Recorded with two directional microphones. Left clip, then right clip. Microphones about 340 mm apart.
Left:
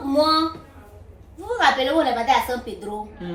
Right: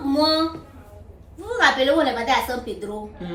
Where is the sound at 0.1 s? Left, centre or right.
Centre.